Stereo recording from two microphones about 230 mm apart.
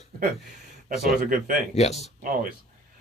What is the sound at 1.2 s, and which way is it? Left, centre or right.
Speech, right.